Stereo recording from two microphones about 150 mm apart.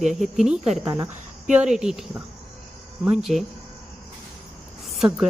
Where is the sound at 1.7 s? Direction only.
5° right (ahead or behind).